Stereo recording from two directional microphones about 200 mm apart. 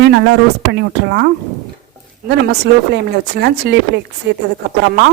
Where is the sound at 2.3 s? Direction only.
60° right (ahead or behind).